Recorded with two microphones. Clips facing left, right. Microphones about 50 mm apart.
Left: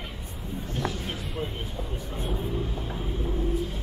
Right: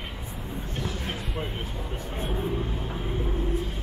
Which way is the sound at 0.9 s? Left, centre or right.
Right.